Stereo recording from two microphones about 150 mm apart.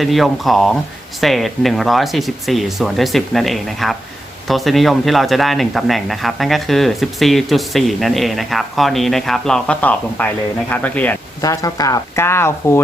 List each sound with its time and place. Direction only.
0.0 s speech: centre (ahead or behind)
11.3 s speech: 25° left (ahead or behind)